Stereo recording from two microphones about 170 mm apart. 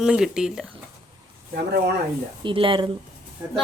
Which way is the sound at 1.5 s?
65° right (ahead or behind).